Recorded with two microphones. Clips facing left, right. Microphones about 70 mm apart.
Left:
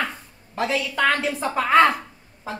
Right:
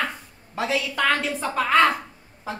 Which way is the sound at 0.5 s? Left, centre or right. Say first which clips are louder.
Left 1 dB; centre.